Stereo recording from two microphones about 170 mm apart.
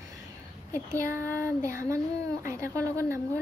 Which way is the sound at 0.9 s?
15° right (ahead or behind).